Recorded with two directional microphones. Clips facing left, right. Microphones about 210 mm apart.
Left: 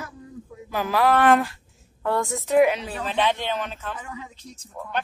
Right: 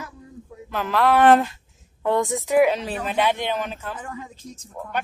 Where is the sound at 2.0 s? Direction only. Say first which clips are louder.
Right 3 dB; 20° right (ahead or behind).